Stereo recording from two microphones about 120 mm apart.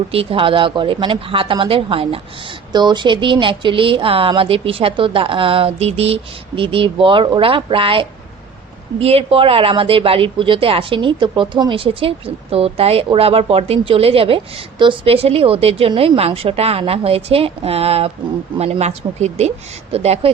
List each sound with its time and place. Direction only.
0.1 s a woman's voice: 50° right (ahead or behind)
2.7 s a woman's voice: 40° right (ahead or behind); by 20.3 s 60° right (ahead or behind)